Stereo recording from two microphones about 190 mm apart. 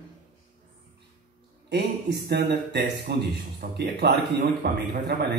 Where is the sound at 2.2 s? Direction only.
60° right (ahead or behind).